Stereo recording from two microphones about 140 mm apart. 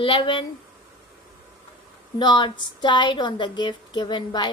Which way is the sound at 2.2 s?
30° left (ahead or behind).